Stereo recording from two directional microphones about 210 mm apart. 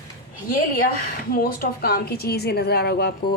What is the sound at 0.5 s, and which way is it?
A woman's voice, 45° left (ahead or behind).